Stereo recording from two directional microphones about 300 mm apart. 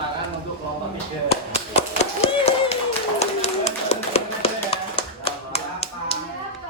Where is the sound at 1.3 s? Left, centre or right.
Left.